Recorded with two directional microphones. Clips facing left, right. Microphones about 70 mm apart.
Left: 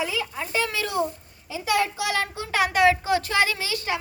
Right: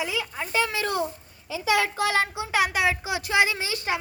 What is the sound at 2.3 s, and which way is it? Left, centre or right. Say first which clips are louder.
Speech: right 1 dB; centre.